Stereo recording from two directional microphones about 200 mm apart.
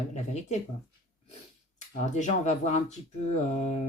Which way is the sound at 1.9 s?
35° left (ahead or behind).